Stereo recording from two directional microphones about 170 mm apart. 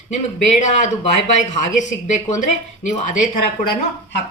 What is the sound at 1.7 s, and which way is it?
Speech, 45° left (ahead or behind).